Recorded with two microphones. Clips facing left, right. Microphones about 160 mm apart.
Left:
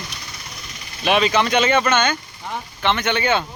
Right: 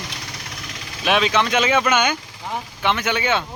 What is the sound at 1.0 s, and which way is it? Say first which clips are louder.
Speech: left 1 dB; centre (ahead or behind).